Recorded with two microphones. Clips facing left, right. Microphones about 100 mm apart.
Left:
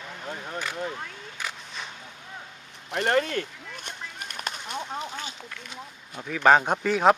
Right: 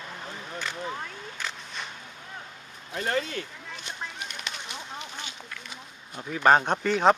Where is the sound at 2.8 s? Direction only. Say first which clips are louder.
Left 5 dB; 75° left (ahead or behind); by 5.3 s 45° left (ahead or behind).